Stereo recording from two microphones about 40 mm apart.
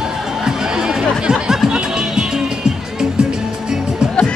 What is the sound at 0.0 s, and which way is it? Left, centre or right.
Music, centre.